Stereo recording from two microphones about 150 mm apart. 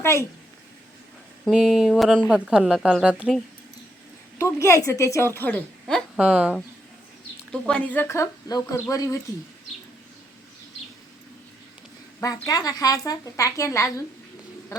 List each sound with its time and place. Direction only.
0.0 s a woman's voice: 15° left (ahead or behind)
1.5 s speech: centre (ahead or behind)
4.4 s speech: 20° left (ahead or behind)
6.1 s speech: 5° right (ahead or behind)
7.5 s speech: 10° left (ahead or behind)
12.2 s speech: 25° left (ahead or behind)